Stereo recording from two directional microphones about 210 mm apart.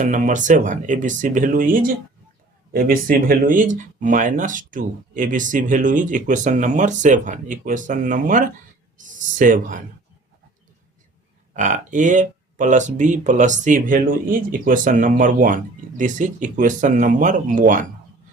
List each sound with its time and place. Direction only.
0.0 s speech: 35° right (ahead or behind)
11.5 s speech: 35° right (ahead or behind)